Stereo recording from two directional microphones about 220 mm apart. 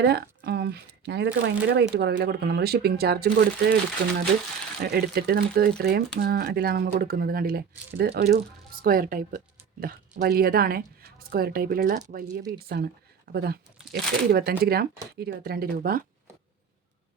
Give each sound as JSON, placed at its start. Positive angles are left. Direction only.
{"t": 0.0, "sound": "speech", "side_deg": -45}
{"t": 4.8, "sound": "speech", "side_deg": -45}